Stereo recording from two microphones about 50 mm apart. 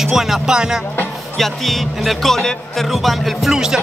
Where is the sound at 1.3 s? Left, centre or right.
Centre.